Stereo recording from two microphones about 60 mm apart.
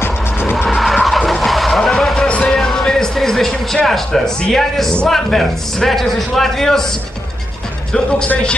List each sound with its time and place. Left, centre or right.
0.0 s music: left
0.7 s vehicle: centre
4.5 s a man's voice: centre